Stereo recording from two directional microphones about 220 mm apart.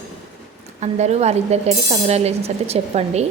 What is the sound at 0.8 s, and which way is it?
Speech, 30° right (ahead or behind).